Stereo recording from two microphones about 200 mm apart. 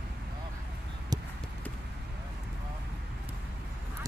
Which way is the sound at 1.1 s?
20° right (ahead or behind).